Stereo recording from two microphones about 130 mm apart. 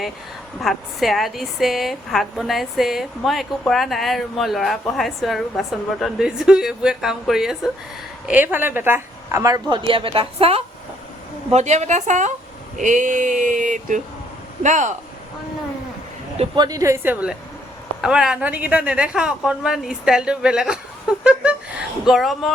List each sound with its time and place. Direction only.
0.6 s a woman's voice: centre (ahead or behind); by 10.6 s 50° right (ahead or behind)
11.5 s a woman's voice: 60° right (ahead or behind)
12.7 s a sound: 75° right (ahead or behind)
16.6 s a woman's voice: 30° right (ahead or behind); by 22.5 s centre (ahead or behind)